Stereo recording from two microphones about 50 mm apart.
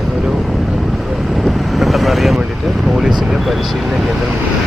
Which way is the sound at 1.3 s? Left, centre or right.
Centre.